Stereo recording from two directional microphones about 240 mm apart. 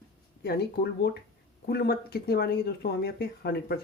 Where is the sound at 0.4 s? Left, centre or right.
Left.